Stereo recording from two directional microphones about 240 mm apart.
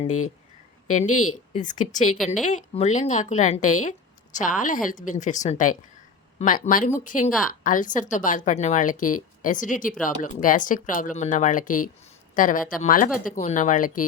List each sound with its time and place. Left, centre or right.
0.9 s a woman's voice: left